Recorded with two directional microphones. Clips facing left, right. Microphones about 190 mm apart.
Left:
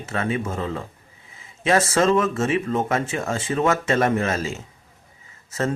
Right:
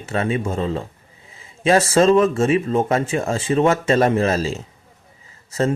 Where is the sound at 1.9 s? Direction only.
30° right (ahead or behind).